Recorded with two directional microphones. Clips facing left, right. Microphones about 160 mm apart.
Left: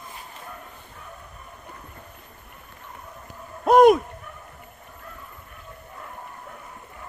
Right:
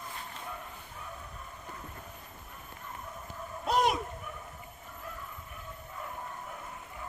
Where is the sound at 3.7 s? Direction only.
55° left (ahead or behind).